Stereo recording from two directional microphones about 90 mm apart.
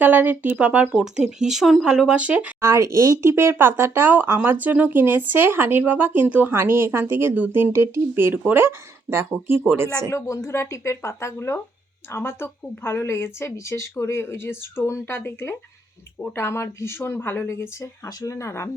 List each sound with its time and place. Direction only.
0.0 s speech: 20° right (ahead or behind)
2.6 s speech: 35° right (ahead or behind)
10.1 s speech: 35° left (ahead or behind)